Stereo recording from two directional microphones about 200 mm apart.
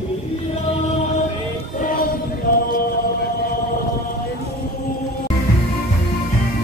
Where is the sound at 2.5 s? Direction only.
45° left (ahead or behind).